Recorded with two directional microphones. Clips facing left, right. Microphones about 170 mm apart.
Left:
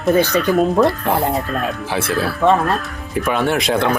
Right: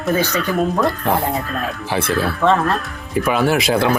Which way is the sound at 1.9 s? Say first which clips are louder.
Right 3 dB; centre (ahead or behind).